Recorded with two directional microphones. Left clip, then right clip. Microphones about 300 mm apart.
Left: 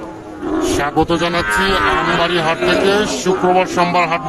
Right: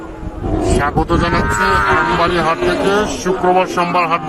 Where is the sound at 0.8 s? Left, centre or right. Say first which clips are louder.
Even; centre.